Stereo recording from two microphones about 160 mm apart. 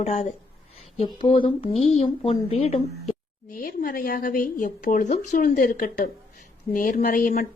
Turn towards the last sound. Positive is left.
turn(degrees=60)  # may be behind; listen again after turning